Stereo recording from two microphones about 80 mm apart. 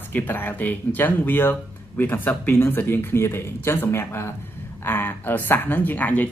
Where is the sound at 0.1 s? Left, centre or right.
Left.